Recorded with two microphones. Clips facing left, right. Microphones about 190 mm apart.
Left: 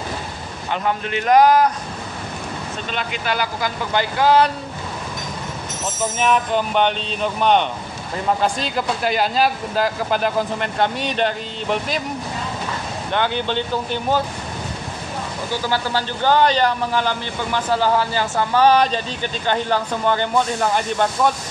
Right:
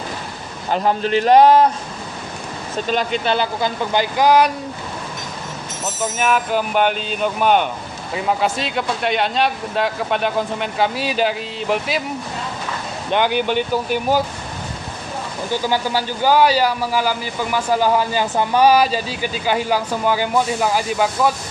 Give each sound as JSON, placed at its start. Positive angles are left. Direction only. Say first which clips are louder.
{"t": 0.7, "sound": "a man's voice", "louder": "right 5 dB", "side_deg": -35}
{"t": 2.9, "sound": "speech", "louder": "right 6 dB", "side_deg": -35}
{"t": 6.1, "sound": "a man's voice", "louder": "even", "side_deg": -5}
{"t": 13.1, "sound": "a man's voice", "louder": "right 4 dB", "side_deg": -15}
{"t": 15.6, "sound": "a man's voice", "louder": "right 1 dB", "side_deg": -10}